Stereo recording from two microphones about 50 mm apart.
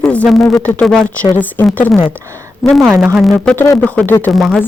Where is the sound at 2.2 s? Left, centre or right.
Right.